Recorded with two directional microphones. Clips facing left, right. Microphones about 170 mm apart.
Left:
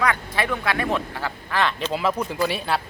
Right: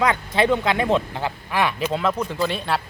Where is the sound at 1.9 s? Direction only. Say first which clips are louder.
Right 1 dB; 5° left (ahead or behind).